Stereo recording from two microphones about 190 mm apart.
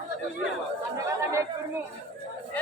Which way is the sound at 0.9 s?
15° right (ahead or behind).